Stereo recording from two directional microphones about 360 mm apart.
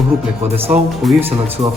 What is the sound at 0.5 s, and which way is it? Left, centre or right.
Speech, centre.